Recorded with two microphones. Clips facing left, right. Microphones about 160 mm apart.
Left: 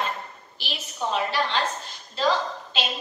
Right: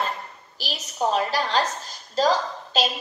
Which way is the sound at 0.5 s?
40° right (ahead or behind).